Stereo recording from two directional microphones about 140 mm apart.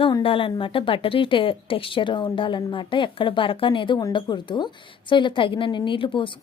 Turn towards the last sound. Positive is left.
turn(degrees=35)  # may be behind; listen again after turning